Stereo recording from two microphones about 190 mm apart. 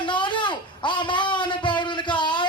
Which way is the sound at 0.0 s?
25° left (ahead or behind).